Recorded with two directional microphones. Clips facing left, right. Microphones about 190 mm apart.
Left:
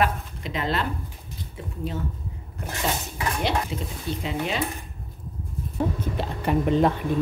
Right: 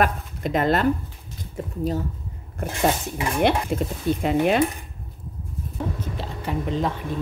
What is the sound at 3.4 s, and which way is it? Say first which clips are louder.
Speech: right 8 dB; 55° right (ahead or behind).